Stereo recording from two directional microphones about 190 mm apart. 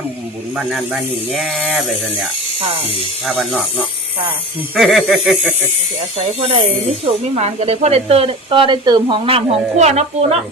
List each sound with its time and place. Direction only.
0.5 s speech: centre (ahead or behind)
3.2 s speech: 5° right (ahead or behind)
6.2 s speech: 30° right (ahead or behind)